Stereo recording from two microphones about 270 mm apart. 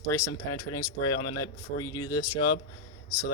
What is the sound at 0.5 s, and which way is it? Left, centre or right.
Speech, left.